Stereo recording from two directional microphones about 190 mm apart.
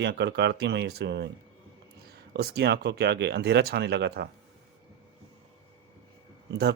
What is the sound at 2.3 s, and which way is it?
Speech, 55° right (ahead or behind).